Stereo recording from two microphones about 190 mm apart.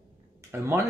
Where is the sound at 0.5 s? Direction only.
15° right (ahead or behind).